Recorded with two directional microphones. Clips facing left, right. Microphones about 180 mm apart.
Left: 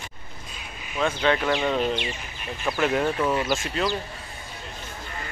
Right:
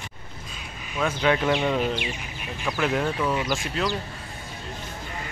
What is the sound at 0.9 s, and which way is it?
Speech, 10° right (ahead or behind).